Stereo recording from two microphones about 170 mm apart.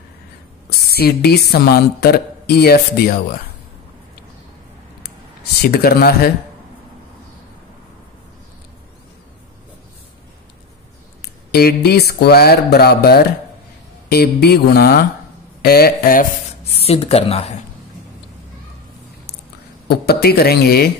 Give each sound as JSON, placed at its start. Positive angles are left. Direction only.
{"t": 0.7, "sound": "speech", "side_deg": 65}
{"t": 5.6, "sound": "speech", "side_deg": 65}
{"t": 11.5, "sound": "speech", "side_deg": 65}
{"t": 16.8, "sound": "speech", "side_deg": 35}
{"t": 19.9, "sound": "speech", "side_deg": 70}